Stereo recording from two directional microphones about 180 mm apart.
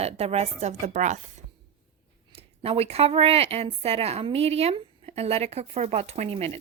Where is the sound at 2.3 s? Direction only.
35° right (ahead or behind).